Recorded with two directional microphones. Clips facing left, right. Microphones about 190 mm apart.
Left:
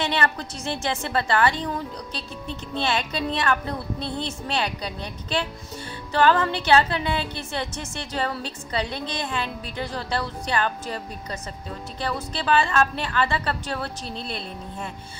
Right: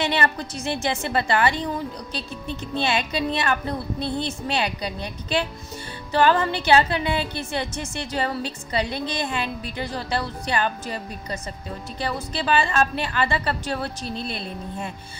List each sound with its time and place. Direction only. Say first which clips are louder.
0.0 s a woman's voice: right 1 dB; 10° right (ahead or behind)